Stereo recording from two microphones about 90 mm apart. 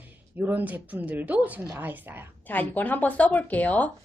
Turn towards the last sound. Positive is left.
turn(degrees=15)  # may be behind; listen again after turning